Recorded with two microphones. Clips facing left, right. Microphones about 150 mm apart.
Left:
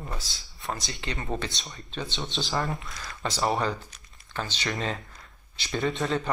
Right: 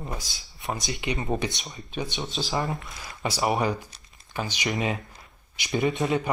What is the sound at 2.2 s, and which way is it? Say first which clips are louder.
Speech: even; centre (ahead or behind).